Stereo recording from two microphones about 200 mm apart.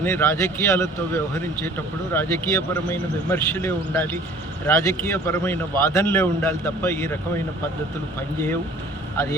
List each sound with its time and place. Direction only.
0.0 s a man's voice: 10° left (ahead or behind)